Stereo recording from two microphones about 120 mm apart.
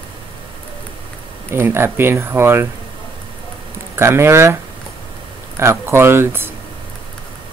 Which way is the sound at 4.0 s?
20° right (ahead or behind).